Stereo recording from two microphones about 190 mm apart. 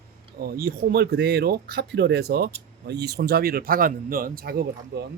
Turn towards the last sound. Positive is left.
turn(degrees=-55)  # may be behind; listen again after turning